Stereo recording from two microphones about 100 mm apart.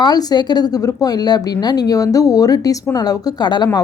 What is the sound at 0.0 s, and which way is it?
A woman's voice, 40° left (ahead or behind).